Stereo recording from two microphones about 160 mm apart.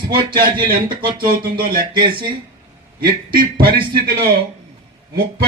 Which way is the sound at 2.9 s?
65° right (ahead or behind).